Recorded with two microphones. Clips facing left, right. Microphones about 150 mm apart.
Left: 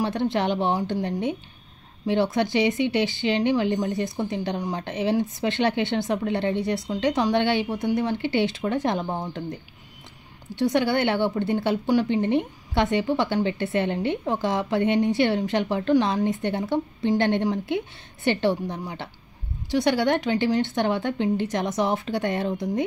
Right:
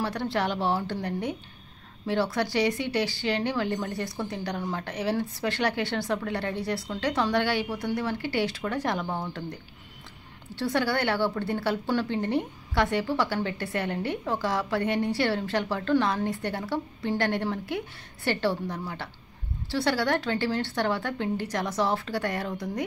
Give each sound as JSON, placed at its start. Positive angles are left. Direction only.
{"t": 0.0, "sound": "a woman's voice", "side_deg": 20}